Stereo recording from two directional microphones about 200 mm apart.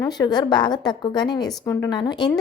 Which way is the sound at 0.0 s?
20° left (ahead or behind).